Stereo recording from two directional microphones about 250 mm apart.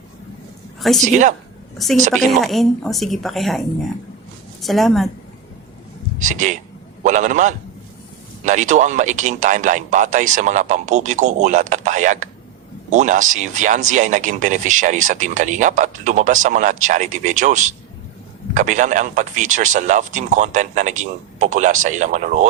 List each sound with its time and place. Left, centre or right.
0.8 s a woman's voice: centre
1.0 s speech: right
1.8 s a woman's voice: centre
4.6 s a woman's voice: centre
6.1 s speech: right